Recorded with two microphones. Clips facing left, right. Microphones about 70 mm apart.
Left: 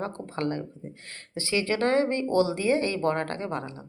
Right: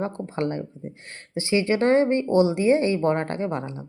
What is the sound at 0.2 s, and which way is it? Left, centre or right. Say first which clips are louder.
Speech: right 3 dB; right.